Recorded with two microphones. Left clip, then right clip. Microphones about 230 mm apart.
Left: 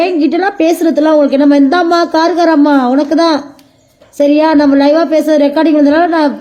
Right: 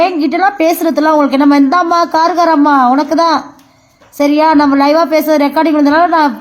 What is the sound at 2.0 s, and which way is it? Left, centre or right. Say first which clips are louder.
Speech: even; right.